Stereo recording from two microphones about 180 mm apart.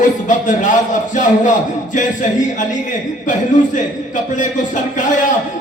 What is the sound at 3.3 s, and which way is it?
A man's voice, 45° left (ahead or behind).